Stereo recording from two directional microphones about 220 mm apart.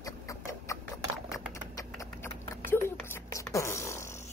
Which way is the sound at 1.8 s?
15° left (ahead or behind).